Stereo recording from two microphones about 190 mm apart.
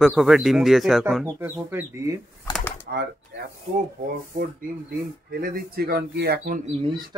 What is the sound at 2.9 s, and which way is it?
Speech, 55° right (ahead or behind).